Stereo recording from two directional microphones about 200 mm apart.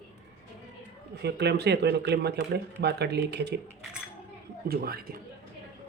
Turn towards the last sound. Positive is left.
turn(degrees=-50)  # may be behind; listen again after turning